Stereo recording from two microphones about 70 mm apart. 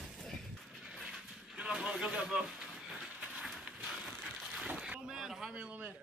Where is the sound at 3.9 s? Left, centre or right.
Centre.